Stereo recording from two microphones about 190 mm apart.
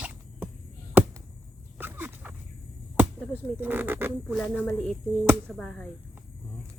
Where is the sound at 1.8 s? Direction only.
10° right (ahead or behind).